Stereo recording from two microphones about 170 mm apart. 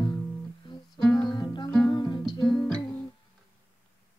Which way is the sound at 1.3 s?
25° left (ahead or behind).